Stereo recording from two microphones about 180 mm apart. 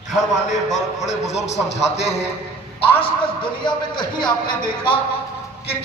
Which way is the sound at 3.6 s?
25° left (ahead or behind).